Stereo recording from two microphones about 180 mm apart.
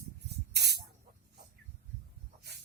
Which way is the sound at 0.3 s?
65° right (ahead or behind).